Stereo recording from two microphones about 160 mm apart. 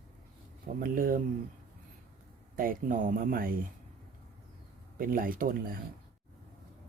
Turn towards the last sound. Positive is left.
turn(degrees=-65)  # may be behind; listen again after turning